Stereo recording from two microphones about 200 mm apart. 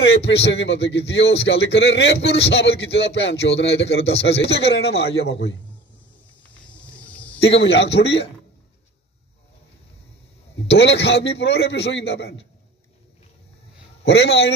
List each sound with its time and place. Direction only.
0.0 s speech: 60° left (ahead or behind)
6.4 s cricket: 5° left (ahead or behind)
7.3 s speech: 65° left (ahead or behind)
10.7 s speech: 60° left (ahead or behind)
14.0 s speech: 55° left (ahead or behind)